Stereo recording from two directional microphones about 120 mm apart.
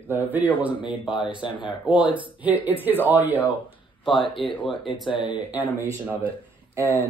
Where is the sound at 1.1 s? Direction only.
45° left (ahead or behind).